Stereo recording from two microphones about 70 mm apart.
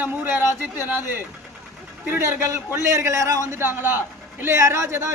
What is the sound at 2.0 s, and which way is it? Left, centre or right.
A man's voice, right.